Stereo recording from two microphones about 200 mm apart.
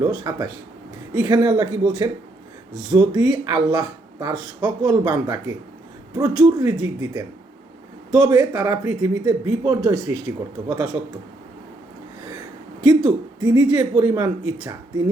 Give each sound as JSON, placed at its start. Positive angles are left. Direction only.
{"t": 0.1, "sound": "speech", "side_deg": -20}
{"t": 2.9, "sound": "speech", "side_deg": -20}
{"t": 12.9, "sound": "speech", "side_deg": -20}